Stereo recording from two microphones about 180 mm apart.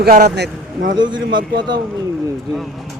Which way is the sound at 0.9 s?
25° right (ahead or behind).